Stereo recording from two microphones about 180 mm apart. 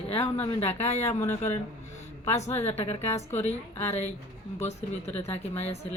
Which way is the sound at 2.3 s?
35° left (ahead or behind).